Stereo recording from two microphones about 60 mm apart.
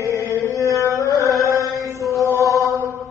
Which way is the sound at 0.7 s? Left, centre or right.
Right.